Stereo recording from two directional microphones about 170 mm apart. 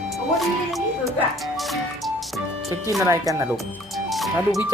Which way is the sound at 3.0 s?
20° right (ahead or behind).